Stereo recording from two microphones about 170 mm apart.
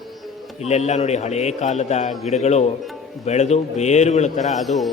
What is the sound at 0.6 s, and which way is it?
A man's voice, 40° left (ahead or behind).